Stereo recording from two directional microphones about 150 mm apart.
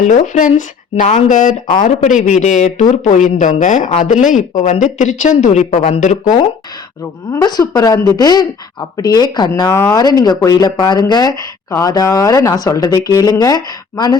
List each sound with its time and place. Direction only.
0.0 s a woman's voice: 60° left (ahead or behind)
7.3 s speech: 25° left (ahead or behind)